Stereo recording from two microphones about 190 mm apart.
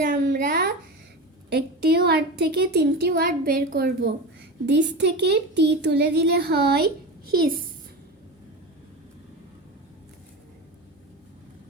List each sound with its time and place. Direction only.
0.0 s a sound: 55° right (ahead or behind)
1.5 s a woman's voice: 60° right (ahead or behind)
4.0 s a woman's voice: 70° right (ahead or behind)